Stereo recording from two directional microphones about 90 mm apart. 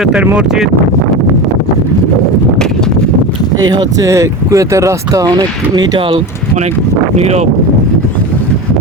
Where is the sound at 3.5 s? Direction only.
50° right (ahead or behind); by 6.2 s 70° right (ahead or behind).